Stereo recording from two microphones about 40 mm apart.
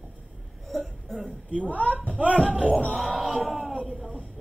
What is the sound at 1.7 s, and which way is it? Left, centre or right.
Speech, left.